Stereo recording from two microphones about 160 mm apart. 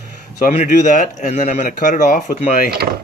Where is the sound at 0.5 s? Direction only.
45° left (ahead or behind).